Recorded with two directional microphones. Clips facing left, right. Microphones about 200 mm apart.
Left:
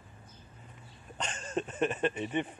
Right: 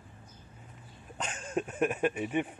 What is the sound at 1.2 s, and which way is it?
Speech, 5° right (ahead or behind).